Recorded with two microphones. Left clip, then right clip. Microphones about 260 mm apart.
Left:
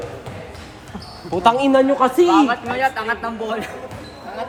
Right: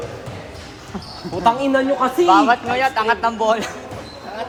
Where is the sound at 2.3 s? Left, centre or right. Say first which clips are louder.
Right 3 dB; centre.